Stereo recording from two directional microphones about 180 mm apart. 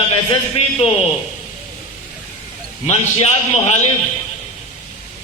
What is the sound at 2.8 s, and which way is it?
Speech, 35° left (ahead or behind).